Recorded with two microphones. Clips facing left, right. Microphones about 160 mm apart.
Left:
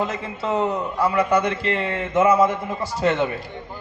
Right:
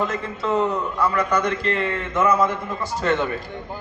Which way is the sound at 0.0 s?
30° left (ahead or behind).